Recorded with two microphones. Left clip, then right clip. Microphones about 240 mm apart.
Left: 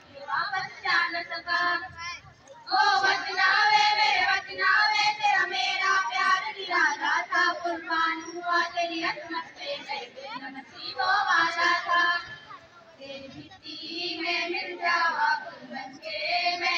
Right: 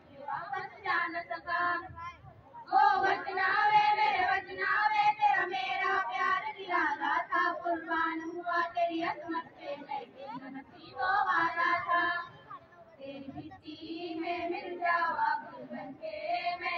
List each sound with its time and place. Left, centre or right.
0.3 s child singing: right
11.2 s music: right
13.7 s child singing: right